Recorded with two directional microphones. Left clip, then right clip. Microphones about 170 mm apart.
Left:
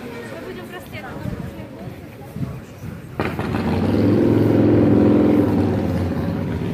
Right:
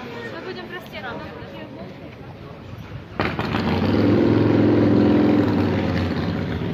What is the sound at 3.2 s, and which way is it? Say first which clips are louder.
Vehicle: even; 5° left (ahead or behind).